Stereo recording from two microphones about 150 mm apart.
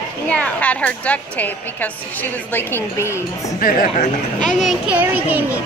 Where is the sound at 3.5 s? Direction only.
70° left (ahead or behind).